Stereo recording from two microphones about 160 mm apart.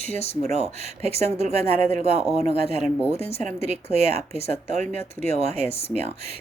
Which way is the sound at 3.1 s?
40° left (ahead or behind).